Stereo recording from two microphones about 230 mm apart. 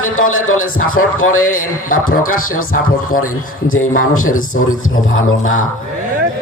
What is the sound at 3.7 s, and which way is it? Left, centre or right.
A man's voice, left.